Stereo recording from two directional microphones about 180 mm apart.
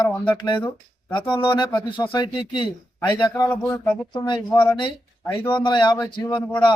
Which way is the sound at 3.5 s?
10° left (ahead or behind).